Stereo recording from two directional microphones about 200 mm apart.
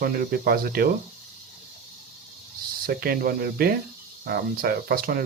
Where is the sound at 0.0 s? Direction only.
50° right (ahead or behind).